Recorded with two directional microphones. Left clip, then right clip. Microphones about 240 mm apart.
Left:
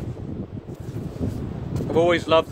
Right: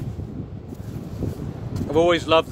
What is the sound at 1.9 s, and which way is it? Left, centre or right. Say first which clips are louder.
Speech: right 1 dB; right.